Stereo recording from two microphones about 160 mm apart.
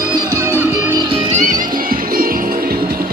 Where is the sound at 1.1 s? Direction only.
40° right (ahead or behind).